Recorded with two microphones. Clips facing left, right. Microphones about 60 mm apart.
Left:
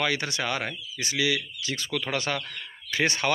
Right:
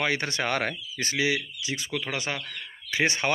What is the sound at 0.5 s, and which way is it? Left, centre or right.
Speech, right.